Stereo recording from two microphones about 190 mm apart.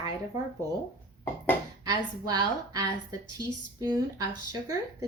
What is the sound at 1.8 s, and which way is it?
A woman's voice, 20° right (ahead or behind).